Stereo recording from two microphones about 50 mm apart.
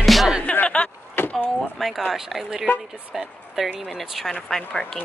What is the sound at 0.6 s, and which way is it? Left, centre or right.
Vehicle, left.